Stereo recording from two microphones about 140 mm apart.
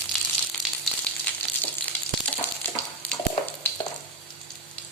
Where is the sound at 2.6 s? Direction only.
15° left (ahead or behind).